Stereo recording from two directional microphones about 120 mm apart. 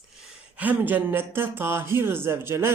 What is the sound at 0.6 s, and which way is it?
Speech, 15° right (ahead or behind).